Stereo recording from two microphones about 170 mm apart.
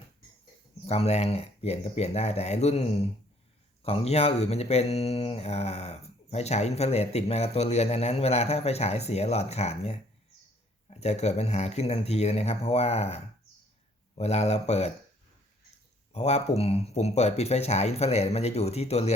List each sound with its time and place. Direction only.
0.9 s speech: 35° left (ahead or behind)
16.1 s speech: 40° left (ahead or behind)